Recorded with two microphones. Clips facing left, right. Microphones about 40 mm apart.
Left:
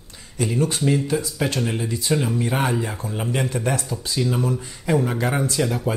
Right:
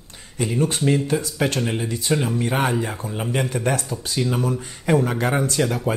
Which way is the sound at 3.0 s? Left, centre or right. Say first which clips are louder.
Even; centre.